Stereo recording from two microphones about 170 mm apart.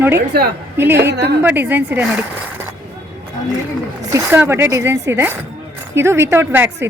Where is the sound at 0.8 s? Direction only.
15° right (ahead or behind).